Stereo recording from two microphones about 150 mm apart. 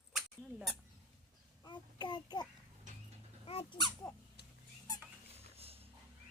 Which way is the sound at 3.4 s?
35° left (ahead or behind).